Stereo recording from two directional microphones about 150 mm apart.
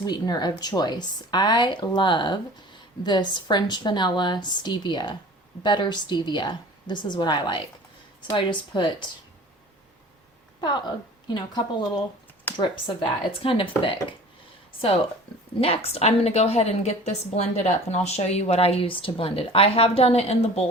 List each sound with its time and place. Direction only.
0.0 s speech: 25° left (ahead or behind)
10.6 s speech: 30° left (ahead or behind)
12.5 s speech: 35° left (ahead or behind)
15.6 s a woman's voice: 40° left (ahead or behind)